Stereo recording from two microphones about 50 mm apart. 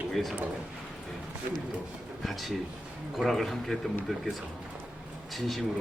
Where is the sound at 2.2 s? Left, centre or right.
Centre.